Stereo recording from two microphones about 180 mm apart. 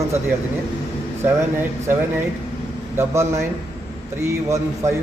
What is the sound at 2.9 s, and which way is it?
Speech, 15° right (ahead or behind).